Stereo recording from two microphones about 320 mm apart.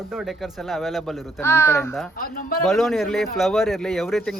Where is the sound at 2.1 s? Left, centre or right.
Left.